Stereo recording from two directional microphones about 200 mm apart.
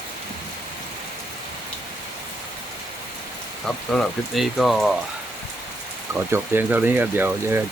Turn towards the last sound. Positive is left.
turn(degrees=-10)  # may be behind; listen again after turning